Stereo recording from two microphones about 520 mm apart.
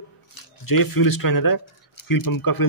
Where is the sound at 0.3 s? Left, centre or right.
Left.